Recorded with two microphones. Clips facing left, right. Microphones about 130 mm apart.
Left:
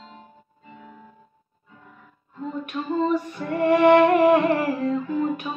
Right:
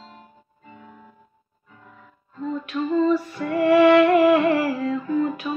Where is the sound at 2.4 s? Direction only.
20° left (ahead or behind).